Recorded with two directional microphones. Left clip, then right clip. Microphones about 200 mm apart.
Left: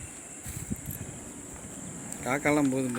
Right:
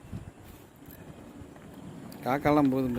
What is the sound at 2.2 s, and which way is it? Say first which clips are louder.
Speech: right 1 dB; 20° right (ahead or behind).